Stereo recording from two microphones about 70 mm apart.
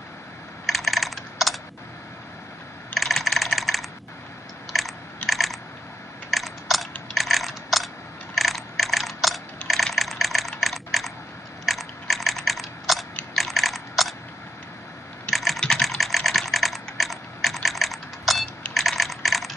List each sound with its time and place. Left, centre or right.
0.7 s computer keyboard: centre
2.9 s computer keyboard: centre
6.3 s mechanisms: centre
8.4 s ratchet: centre
9.6 s typing: left
9.9 s typing: centre
13.3 s a sound: centre
15.3 s typing: centre
18.7 s computer keyboard: centre